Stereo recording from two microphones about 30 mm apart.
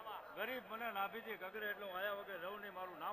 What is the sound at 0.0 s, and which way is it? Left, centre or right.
A man's voice, left.